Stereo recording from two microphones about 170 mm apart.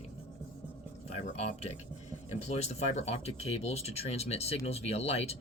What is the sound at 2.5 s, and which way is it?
Speech, 40° left (ahead or behind).